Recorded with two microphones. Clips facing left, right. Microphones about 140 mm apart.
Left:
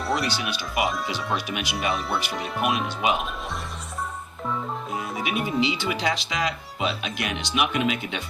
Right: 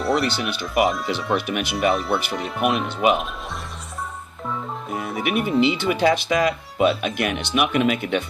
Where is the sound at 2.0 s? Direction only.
Centre (ahead or behind).